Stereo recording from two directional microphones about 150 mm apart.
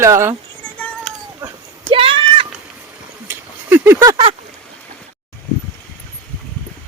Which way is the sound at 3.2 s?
15° right (ahead or behind).